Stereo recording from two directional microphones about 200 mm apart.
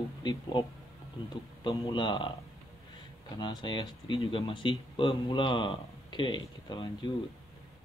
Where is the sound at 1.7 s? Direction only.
25° left (ahead or behind).